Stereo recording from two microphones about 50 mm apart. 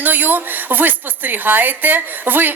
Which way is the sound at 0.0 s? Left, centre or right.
Right.